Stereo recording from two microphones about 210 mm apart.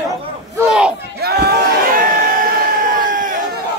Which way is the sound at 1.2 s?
50° right (ahead or behind).